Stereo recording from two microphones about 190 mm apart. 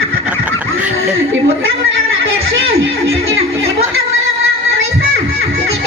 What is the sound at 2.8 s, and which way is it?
Speech, 90° right.